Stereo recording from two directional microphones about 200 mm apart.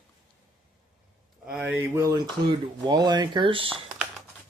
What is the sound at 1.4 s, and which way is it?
Speech, 5° right (ahead or behind).